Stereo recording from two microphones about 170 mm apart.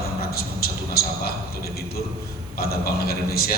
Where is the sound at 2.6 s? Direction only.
65° left (ahead or behind).